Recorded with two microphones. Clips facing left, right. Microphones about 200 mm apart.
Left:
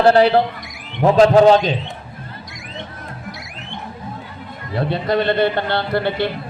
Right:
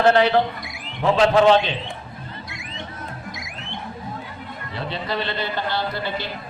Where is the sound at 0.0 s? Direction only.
35° left (ahead or behind).